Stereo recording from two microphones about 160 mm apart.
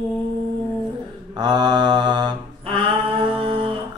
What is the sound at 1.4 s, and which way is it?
Mantra, 25° right (ahead or behind).